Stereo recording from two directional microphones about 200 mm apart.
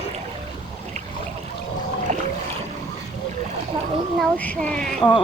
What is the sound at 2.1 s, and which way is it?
Boat, 40° right (ahead or behind).